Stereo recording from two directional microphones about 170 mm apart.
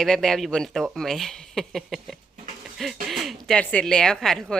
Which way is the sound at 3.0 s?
Centre (ahead or behind).